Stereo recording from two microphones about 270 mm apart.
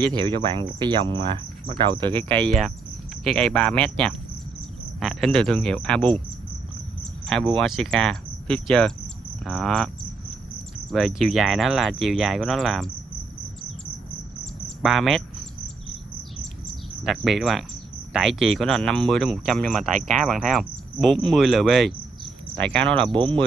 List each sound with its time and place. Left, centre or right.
0.1 s speech: centre
2.3 s speech: centre
7.5 s speech: centre
10.9 s speech: centre
14.8 s speech: centre
17.0 s speech: centre
23.1 s speech: centre